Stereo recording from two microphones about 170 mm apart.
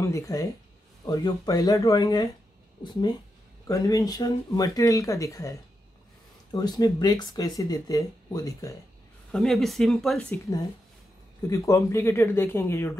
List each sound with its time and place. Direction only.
0.0 s speech: 20° left (ahead or behind)
9.3 s speech: centre (ahead or behind)
11.4 s speech: 20° left (ahead or behind)